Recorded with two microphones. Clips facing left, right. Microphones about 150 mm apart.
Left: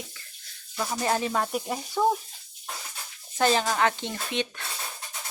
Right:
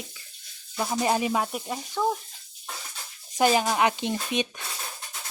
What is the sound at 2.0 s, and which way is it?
Speech, 10° left (ahead or behind).